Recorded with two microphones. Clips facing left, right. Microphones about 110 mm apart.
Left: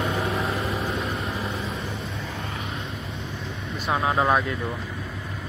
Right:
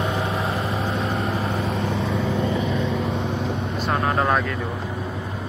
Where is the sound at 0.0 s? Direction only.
25° right (ahead or behind).